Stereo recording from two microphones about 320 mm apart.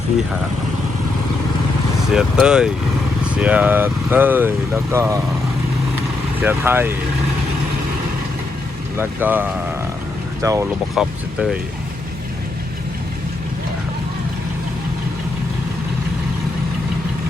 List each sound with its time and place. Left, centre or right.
2.1 s speech: centre
6.4 s speech: centre
9.0 s speech: centre